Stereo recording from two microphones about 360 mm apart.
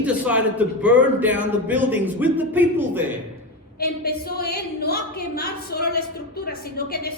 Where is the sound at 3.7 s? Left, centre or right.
Left.